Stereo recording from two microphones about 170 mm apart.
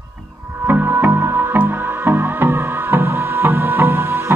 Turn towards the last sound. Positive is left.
turn(degrees=-15)  # may be behind; listen again after turning